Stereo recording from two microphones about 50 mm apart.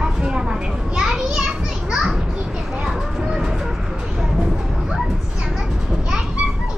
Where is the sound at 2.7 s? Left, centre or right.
Centre.